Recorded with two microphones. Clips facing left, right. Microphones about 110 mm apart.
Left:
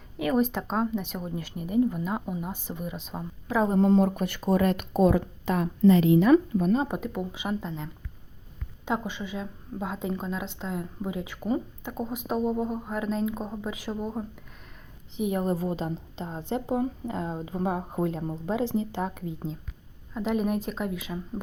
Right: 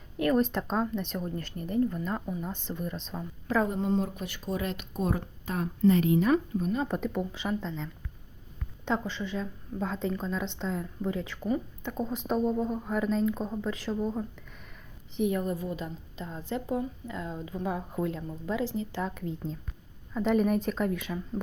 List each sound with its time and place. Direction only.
0.2 s speech: 5° left (ahead or behind)
3.8 s speech: 75° left (ahead or behind)
4.1 s speech: 55° left (ahead or behind)
4.9 s speech: 85° left
6.8 s a woman's voice: 10° left (ahead or behind); by 18.7 s 25° left (ahead or behind)
20.1 s speech: 5° left (ahead or behind)